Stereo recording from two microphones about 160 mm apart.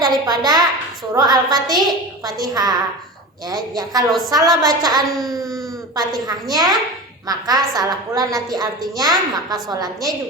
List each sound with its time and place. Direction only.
0.0 s a woman's voice: 25° right (ahead or behind)
5.1 s speech: centre (ahead or behind)
6.0 s a woman's voice: 25° right (ahead or behind)